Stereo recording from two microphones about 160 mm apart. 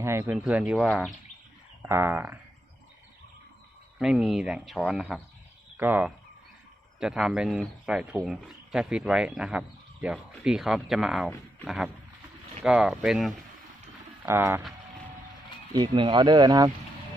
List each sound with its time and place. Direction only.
0.0 s speech: 15° right (ahead or behind)
0.3 s speech: 5° right (ahead or behind)
1.8 s speech: 15° right (ahead or behind)
3.9 s speech: 5° right (ahead or behind)
14.3 s speech: 15° right (ahead or behind)
15.7 s speech: 30° right (ahead or behind)